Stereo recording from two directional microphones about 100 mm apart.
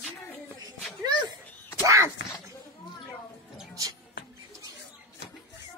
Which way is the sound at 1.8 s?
30° right (ahead or behind).